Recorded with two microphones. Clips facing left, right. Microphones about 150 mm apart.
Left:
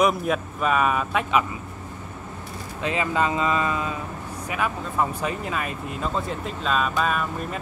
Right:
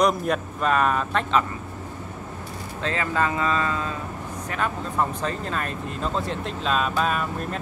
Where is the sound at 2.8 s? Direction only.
15° left (ahead or behind).